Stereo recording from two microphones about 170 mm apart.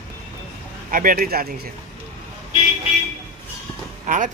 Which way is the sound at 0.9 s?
55° right (ahead or behind).